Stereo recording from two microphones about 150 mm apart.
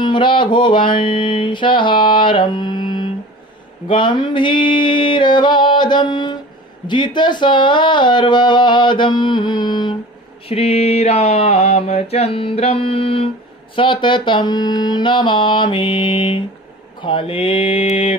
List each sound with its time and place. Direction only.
0.0 s mantra: 35° left (ahead or behind)
10.4 s mantra: 40° left (ahead or behind)